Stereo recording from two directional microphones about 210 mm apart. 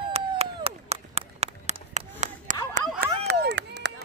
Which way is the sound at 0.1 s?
30° right (ahead or behind).